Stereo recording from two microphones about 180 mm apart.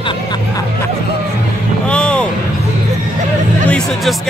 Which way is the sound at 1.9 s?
5° left (ahead or behind).